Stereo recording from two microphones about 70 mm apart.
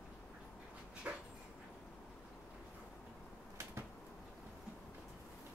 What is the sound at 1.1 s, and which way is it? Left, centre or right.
Dog, right.